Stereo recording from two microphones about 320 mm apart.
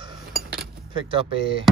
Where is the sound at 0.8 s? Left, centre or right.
Centre.